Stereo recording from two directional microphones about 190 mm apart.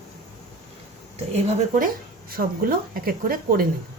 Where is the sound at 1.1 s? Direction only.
35° right (ahead or behind); by 3.6 s 50° right (ahead or behind).